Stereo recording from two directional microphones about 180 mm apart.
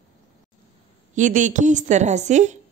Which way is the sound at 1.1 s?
45° right (ahead or behind).